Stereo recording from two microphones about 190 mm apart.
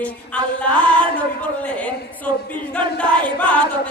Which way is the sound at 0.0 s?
5° left (ahead or behind).